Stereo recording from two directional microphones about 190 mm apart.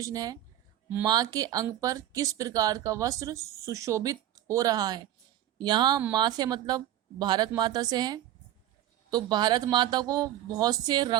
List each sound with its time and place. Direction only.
0.0 s speech: 20° right (ahead or behind)